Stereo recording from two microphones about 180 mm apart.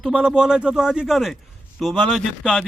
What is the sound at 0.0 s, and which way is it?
A man's voice, 5° right (ahead or behind).